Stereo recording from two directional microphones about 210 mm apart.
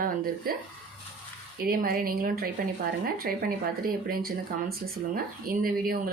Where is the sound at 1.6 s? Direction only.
45° right (ahead or behind).